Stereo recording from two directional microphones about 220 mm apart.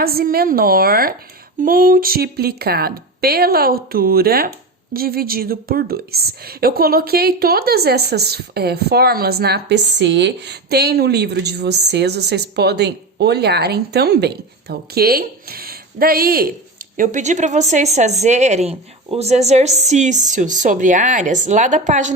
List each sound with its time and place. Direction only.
0.0 s a woman's voice: 45° right (ahead or behind)